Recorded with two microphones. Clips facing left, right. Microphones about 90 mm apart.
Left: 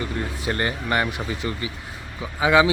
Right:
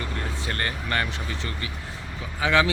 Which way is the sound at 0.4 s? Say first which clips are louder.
Left 6 dB; 20° left (ahead or behind).